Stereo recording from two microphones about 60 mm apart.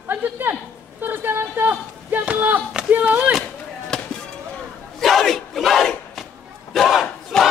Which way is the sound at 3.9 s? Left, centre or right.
Centre.